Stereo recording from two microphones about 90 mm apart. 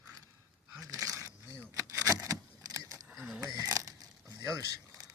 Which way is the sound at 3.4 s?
40° right (ahead or behind).